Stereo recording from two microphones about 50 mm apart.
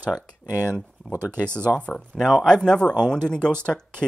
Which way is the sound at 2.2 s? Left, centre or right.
Centre.